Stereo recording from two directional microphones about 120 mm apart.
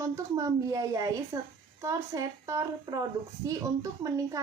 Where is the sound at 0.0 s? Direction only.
25° right (ahead or behind).